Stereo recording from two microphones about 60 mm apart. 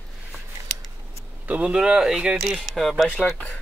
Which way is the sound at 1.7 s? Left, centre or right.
Centre.